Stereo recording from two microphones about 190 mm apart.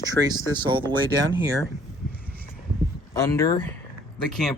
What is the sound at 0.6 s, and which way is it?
Speech, 25° right (ahead or behind).